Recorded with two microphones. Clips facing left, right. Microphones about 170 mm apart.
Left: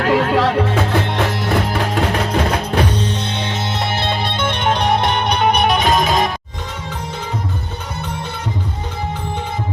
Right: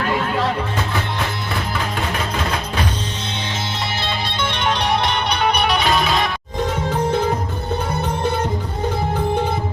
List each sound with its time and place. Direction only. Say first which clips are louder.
0.0 s music: left 5 dB; 75° left (ahead or behind)
4.0 s music: left 4 dB; 50° left (ahead or behind)